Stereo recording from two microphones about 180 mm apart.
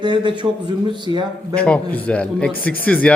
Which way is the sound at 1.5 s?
5° left (ahead or behind).